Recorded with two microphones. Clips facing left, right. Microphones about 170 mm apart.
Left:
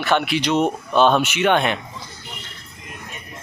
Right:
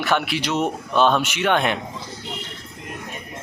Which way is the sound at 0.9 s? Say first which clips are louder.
Left 2 dB; 30° left (ahead or behind).